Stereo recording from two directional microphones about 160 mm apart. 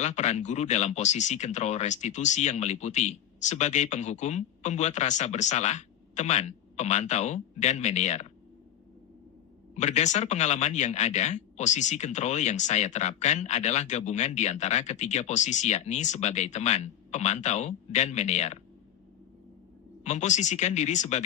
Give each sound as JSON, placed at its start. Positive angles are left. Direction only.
{"t": 0.0, "sound": "speech", "side_deg": 45}
{"t": 9.8, "sound": "speech", "side_deg": 45}
{"t": 20.0, "sound": "speech", "side_deg": 45}